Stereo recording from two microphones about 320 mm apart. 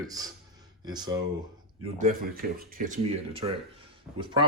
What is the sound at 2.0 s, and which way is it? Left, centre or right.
Speech, right.